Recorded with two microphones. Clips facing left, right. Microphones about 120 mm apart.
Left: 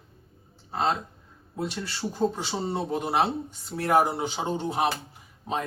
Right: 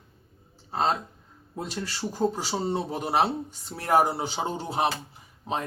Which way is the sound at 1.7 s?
40° right (ahead or behind).